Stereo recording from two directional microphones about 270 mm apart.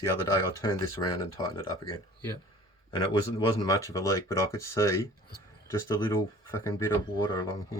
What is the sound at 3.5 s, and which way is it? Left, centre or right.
Speech, centre.